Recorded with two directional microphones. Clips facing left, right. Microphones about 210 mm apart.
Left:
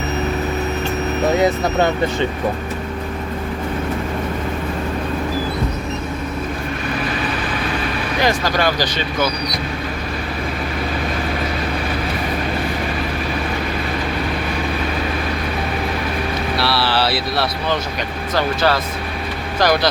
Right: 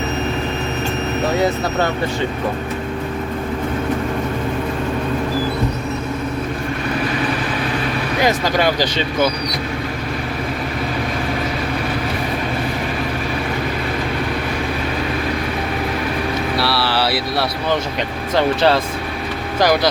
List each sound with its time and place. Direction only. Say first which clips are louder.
8.2 s speech: right 1 dB; 20° right (ahead or behind)
16.6 s speech: left 1 dB; 5° right (ahead or behind)
18.3 s speech: right 3 dB; 25° right (ahead or behind)